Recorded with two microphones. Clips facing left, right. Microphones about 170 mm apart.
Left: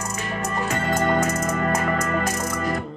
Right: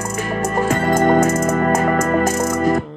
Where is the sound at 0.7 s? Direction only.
45° right (ahead or behind).